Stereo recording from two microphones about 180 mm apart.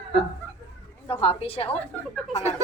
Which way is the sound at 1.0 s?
30° left (ahead or behind).